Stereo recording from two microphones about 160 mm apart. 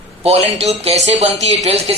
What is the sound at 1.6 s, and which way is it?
Speech, 40° right (ahead or behind).